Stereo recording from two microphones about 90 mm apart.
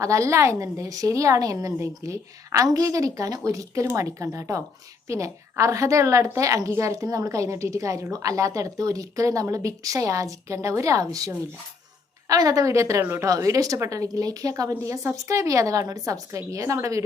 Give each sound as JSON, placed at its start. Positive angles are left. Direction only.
{"t": 0.0, "sound": "a woman's voice", "side_deg": -35}